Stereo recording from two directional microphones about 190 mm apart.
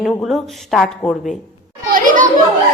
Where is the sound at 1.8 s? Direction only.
45° right (ahead or behind).